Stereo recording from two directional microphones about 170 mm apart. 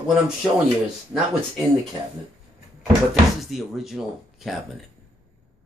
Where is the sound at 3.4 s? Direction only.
Centre (ahead or behind).